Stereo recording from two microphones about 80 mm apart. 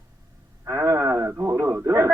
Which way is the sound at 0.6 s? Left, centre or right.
Right.